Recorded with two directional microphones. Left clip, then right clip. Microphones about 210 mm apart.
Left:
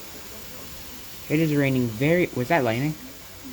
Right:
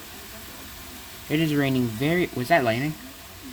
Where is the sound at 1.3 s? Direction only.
10° right (ahead or behind).